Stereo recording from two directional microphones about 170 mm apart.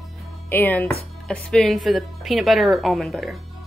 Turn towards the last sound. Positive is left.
turn(degrees=0)  # may be behind; listen again after turning